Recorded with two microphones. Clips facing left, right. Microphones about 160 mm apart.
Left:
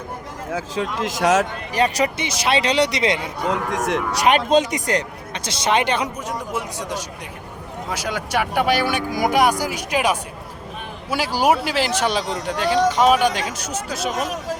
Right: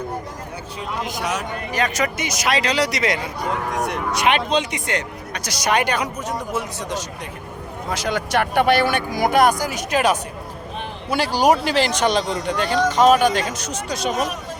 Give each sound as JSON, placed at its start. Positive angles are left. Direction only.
{"t": 0.5, "sound": "speech", "side_deg": 90}
{"t": 1.7, "sound": "speech", "side_deg": 35}
{"t": 3.7, "sound": "speech", "side_deg": 90}
{"t": 4.1, "sound": "speech", "side_deg": 40}
{"t": 5.3, "sound": "speech", "side_deg": 25}